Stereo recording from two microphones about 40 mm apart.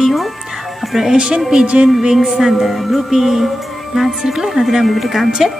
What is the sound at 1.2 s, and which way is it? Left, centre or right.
Music, right.